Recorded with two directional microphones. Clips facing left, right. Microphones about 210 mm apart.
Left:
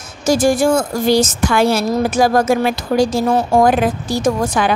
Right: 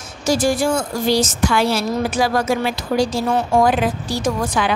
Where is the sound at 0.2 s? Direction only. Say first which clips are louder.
Left 4 dB; 50° left (ahead or behind).